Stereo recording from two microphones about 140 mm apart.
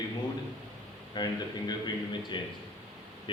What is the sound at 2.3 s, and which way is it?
Speech, 35° left (ahead or behind).